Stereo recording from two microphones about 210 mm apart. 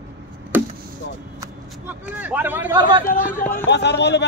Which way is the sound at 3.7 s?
55° left (ahead or behind).